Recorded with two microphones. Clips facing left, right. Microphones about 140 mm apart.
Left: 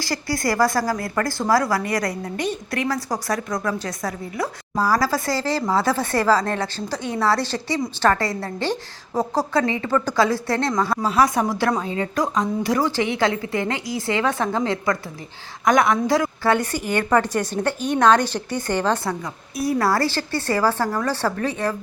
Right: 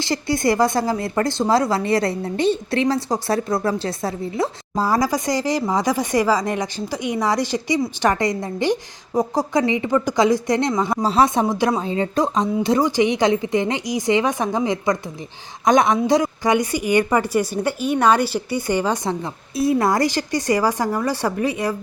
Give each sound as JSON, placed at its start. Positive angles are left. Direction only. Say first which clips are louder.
{"t": 0.0, "sound": "a woman's voice", "louder": "right 4 dB", "side_deg": -20}
{"t": 19.2, "sound": "a woman's voice", "louder": "right 4 dB", "side_deg": -25}